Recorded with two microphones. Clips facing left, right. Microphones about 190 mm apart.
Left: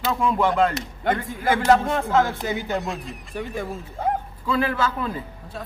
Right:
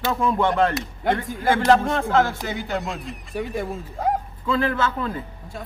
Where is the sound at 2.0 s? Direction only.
15° left (ahead or behind).